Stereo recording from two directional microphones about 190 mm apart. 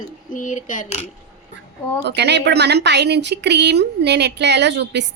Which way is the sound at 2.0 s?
65° right (ahead or behind).